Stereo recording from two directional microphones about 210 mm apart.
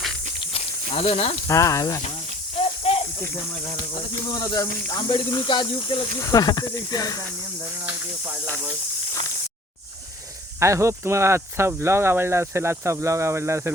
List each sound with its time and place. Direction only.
0.3 s snake: 30° left (ahead or behind)
1.5 s speech: 15° left (ahead or behind)
3.9 s speech: 20° left (ahead or behind)
10.6 s speech: 15° right (ahead or behind)